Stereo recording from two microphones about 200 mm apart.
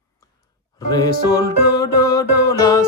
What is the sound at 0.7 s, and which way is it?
Music, 20° left (ahead or behind).